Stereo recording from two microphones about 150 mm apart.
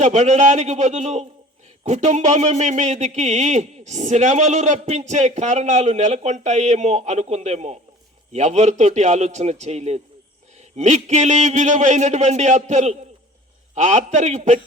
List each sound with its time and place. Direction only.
0.0 s a man's voice: 50° right (ahead or behind)